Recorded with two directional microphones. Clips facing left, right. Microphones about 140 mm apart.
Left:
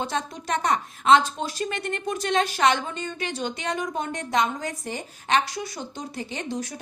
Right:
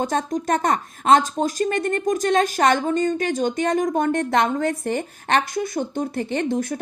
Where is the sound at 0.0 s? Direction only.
45° right (ahead or behind).